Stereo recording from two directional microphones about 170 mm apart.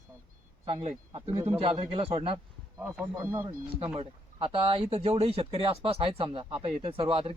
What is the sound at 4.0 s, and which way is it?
Speech, 35° right (ahead or behind).